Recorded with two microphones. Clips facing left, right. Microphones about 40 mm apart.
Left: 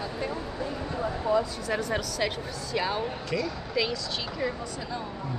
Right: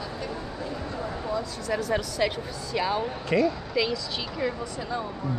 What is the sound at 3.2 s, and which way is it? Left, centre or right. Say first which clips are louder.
Speech: right 7 dB; right.